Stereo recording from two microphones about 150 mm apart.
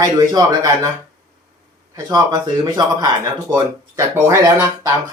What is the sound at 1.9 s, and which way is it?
Speech, 25° right (ahead or behind).